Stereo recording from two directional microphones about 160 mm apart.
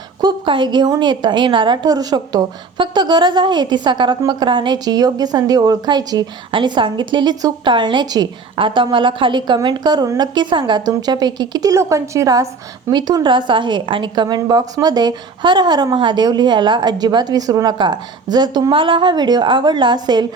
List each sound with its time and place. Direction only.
0.2 s a woman's voice: 30° right (ahead or behind)